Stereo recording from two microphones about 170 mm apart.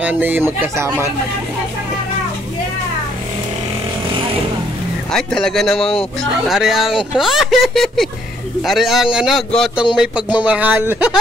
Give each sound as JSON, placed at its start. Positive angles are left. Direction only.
{"t": 0.0, "sound": "speech", "side_deg": -10}
{"t": 5.1, "sound": "speech", "side_deg": 5}
{"t": 5.8, "sound": "speech", "side_deg": 35}
{"t": 6.4, "sound": "speech", "side_deg": 0}